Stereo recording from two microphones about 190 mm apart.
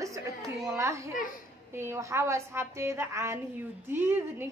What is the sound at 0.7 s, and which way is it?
Children playing, 15° right (ahead or behind).